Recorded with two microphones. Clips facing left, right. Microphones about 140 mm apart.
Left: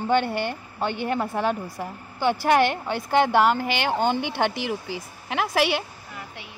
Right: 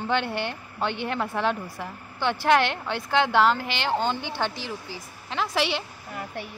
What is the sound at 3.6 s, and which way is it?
Speech, 50° left (ahead or behind).